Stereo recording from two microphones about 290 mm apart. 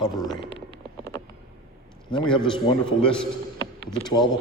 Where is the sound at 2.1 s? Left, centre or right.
Centre.